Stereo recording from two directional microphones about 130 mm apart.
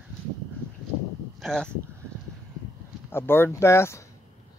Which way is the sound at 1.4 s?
5° left (ahead or behind).